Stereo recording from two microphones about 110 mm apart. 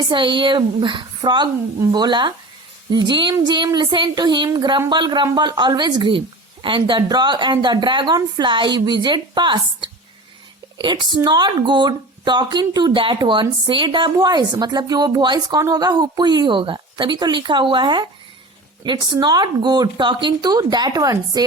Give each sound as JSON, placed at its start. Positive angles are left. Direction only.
{"t": 0.1, "sound": "a woman's voice", "side_deg": -45}